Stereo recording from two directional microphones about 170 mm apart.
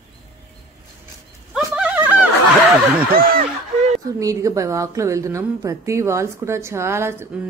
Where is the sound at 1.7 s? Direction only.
10° right (ahead or behind).